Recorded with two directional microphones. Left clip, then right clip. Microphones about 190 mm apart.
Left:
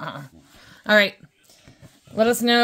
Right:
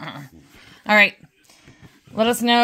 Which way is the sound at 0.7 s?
45° left (ahead or behind).